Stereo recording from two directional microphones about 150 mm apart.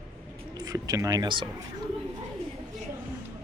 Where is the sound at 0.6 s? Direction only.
25° right (ahead or behind).